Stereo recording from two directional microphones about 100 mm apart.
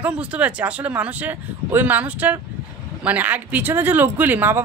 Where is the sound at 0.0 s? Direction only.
10° right (ahead or behind).